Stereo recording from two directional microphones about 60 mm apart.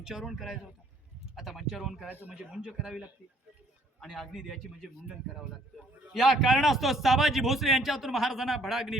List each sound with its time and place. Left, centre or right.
0.0 s a man's voice: centre
2.0 s a man's voice: right
2.3 s speech: centre
4.0 s a man's voice: centre